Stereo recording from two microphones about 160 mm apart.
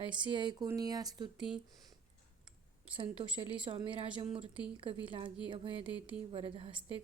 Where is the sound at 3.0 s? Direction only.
35° right (ahead or behind).